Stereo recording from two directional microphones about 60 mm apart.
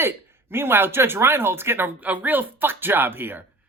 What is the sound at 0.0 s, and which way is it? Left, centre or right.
Speech, right.